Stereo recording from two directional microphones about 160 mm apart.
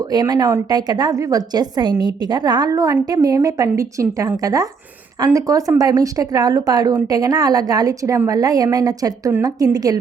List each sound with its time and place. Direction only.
0.0 s a woman's voice: 25° right (ahead or behind)